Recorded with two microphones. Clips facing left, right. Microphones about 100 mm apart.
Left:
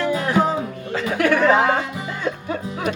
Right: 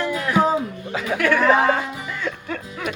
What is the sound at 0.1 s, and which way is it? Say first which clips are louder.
Music: left 3 dB; 30° left (ahead or behind).